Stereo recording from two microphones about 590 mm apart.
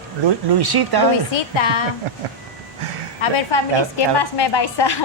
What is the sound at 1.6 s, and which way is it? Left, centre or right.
Speech, left.